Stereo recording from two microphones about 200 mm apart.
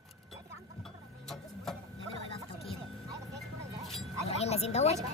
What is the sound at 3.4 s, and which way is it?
Music, centre (ahead or behind).